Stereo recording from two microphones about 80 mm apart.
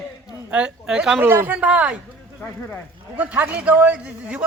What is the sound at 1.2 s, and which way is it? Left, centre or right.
Speech, right.